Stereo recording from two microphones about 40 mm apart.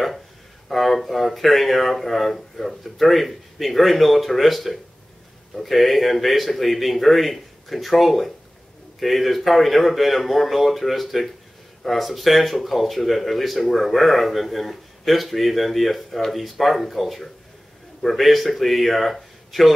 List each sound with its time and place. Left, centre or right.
0.7 s speech: centre